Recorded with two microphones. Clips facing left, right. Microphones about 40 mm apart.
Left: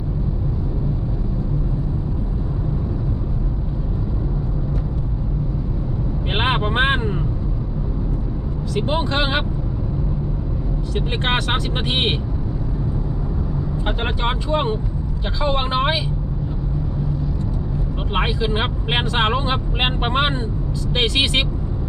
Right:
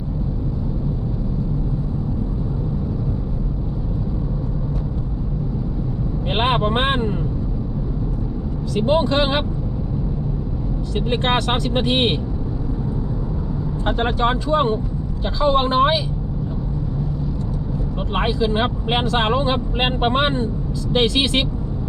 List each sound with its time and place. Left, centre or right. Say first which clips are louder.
6.3 s vehicle: right 1 dB; centre
8.9 s speech: right 5 dB; centre
10.9 s speech: right 2 dB; centre
13.8 s speech: right 5 dB; centre
18.1 s speech: right 2 dB; centre